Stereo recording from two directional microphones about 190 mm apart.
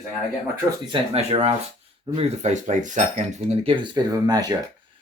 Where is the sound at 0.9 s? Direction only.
30° right (ahead or behind).